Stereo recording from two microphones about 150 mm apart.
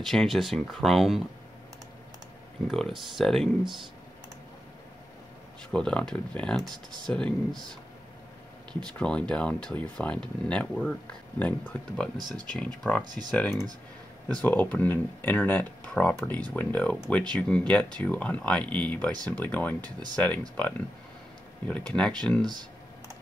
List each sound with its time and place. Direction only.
0.0 s speech: 5° left (ahead or behind)
2.7 s speech: centre (ahead or behind)
5.7 s speech: 5° left (ahead or behind)
8.8 s speech: 5° left (ahead or behind)
12.2 s speech: 30° right (ahead or behind)
12.5 s speech: 10° left (ahead or behind)
22.4 s a sound: 30° right (ahead or behind)